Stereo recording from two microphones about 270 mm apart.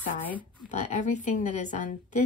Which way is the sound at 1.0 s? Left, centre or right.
Left.